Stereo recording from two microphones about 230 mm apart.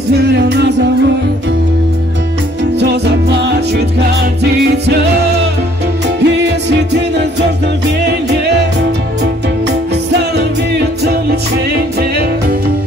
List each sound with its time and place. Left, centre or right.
0.1 s music: right
2.8 s music: right
6.2 s music: right
10.3 s music: right